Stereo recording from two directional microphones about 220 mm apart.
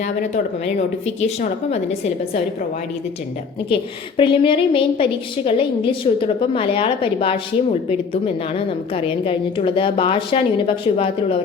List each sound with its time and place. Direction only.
0.0 s a woman's voice: 30° left (ahead or behind)
4.2 s a woman's voice: 25° left (ahead or behind)